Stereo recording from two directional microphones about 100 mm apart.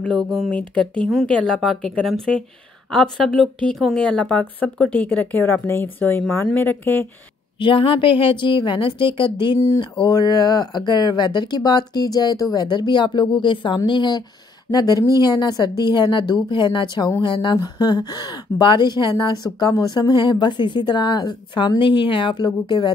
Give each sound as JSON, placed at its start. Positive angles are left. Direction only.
{"t": 0.3, "sound": "speech", "side_deg": 5}
{"t": 7.5, "sound": "a woman's voice", "side_deg": 60}
{"t": 10.0, "sound": "speech", "side_deg": 45}